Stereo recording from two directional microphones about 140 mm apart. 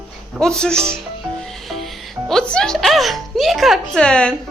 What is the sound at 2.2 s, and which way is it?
Speech, 5° left (ahead or behind).